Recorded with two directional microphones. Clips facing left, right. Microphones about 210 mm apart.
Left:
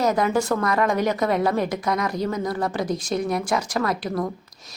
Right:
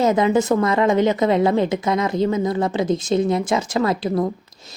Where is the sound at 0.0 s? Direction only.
25° right (ahead or behind).